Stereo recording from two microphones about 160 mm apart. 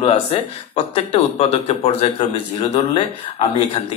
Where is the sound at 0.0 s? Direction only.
35° left (ahead or behind).